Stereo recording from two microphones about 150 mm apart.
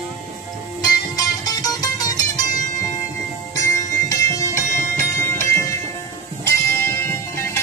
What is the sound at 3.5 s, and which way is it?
Music, 20° left (ahead or behind).